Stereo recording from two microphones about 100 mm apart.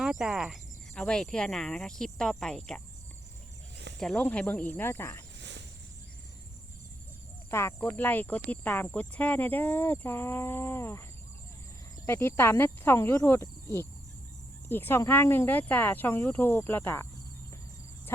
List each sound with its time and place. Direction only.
0.0 s speech: 5° right (ahead or behind)
0.9 s speech: 10° left (ahead or behind)
4.2 s speech: 15° left (ahead or behind)
7.5 s speech: 25° left (ahead or behind)
12.0 s speech: 25° left (ahead or behind)
14.7 s speech: 20° left (ahead or behind)